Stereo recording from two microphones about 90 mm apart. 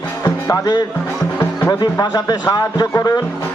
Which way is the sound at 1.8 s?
45° left (ahead or behind).